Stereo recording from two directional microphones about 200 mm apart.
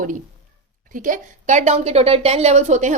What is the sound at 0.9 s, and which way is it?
A woman's voice, 40° right (ahead or behind).